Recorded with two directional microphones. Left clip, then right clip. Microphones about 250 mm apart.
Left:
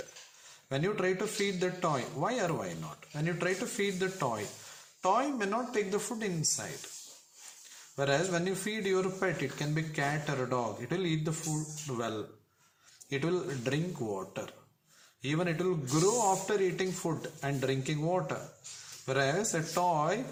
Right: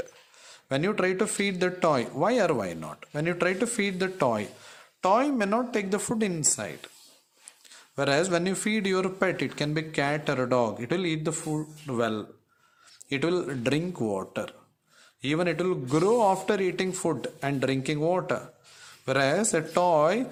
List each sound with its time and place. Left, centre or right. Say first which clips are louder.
0.7 s a man's voice: right 5 dB; right
7.9 s a man's voice: right 6 dB; right